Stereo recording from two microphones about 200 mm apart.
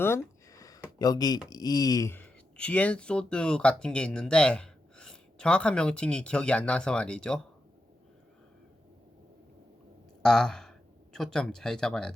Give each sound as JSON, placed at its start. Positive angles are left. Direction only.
{"t": 0.0, "sound": "a sound", "side_deg": 15}
{"t": 0.9, "sound": "speech", "side_deg": 20}
{"t": 10.2, "sound": "speech", "side_deg": 0}